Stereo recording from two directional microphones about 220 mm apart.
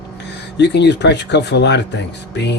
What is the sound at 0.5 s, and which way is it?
Speech, 50° left (ahead or behind).